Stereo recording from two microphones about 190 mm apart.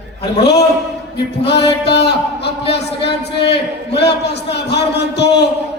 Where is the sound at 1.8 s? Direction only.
60° left (ahead or behind).